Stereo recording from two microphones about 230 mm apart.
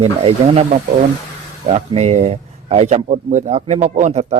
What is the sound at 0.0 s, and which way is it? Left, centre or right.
Speech, right.